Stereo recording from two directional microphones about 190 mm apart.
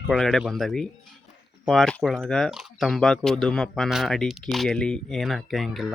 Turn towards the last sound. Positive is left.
turn(degrees=0)  # may be behind; listen again after turning